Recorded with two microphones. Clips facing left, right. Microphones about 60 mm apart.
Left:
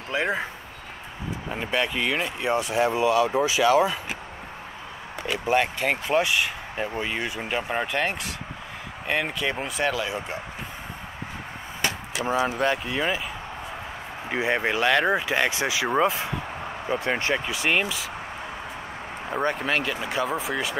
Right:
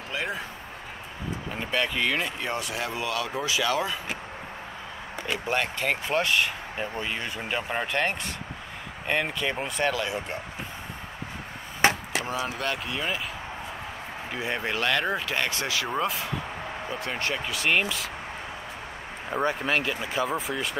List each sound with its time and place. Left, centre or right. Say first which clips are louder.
0.1 s speech: left 6 dB; left
1.5 s speech: left 2 dB; centre
5.2 s speech: left 5 dB; centre
11.8 s chop: right 5 dB; right
12.3 s speech: left 9 dB; left
14.3 s speech: left 6 dB; left
17.6 s speech: even; centre
19.3 s speech: left 1 dB; centre